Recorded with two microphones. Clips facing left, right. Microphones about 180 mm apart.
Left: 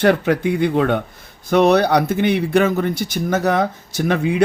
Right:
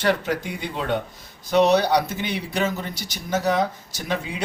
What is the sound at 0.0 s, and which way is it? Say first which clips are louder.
Speech: left 7 dB; 60° left (ahead or behind).